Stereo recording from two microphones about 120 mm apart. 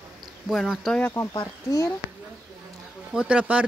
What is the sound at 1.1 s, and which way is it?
Speech, 30° left (ahead or behind).